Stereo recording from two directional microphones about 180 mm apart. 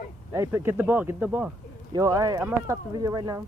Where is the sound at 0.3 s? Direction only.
15° right (ahead or behind).